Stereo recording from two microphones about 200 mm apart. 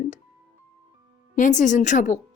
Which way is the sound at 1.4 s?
40° left (ahead or behind).